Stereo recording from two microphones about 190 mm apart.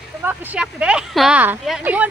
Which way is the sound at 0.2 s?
10° right (ahead or behind).